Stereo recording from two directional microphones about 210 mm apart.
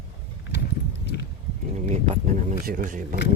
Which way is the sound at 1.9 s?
30° right (ahead or behind).